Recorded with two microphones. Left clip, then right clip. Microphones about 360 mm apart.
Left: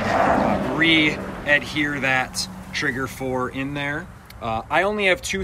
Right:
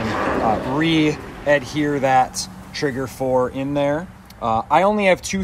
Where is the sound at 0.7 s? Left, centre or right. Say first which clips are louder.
Left 1 dB; centre.